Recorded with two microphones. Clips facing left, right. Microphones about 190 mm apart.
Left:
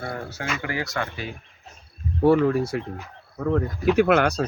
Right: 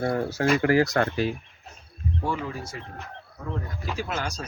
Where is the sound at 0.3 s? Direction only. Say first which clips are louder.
Right 9 dB; 35° right (ahead or behind).